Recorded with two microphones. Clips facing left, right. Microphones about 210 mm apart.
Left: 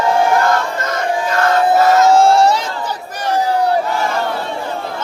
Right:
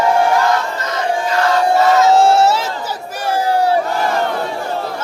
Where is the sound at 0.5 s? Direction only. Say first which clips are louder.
Left 1 dB; 50° left (ahead or behind).